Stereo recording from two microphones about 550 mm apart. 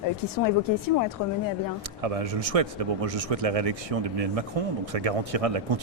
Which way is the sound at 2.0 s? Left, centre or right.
Right.